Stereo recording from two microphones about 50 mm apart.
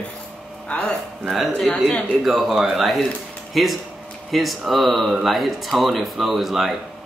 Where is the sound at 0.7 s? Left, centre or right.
Centre.